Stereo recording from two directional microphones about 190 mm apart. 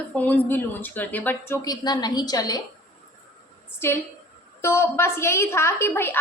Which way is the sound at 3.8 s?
15° left (ahead or behind).